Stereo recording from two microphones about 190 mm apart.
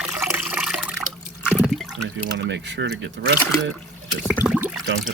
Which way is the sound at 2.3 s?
65° right (ahead or behind).